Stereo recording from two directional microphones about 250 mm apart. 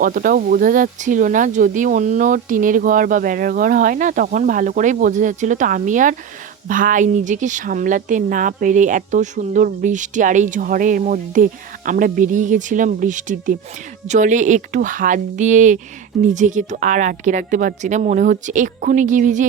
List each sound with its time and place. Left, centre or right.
0.0 s speech: right